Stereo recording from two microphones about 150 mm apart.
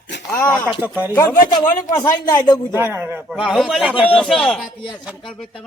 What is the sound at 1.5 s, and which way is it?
Speech, 25° left (ahead or behind).